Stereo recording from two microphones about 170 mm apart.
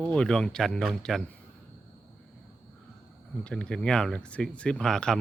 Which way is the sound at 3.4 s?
5° left (ahead or behind).